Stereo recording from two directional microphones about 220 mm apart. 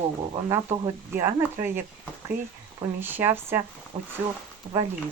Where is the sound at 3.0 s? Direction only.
10° right (ahead or behind).